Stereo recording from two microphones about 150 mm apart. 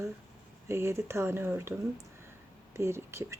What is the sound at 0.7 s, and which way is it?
Speech, 15° right (ahead or behind).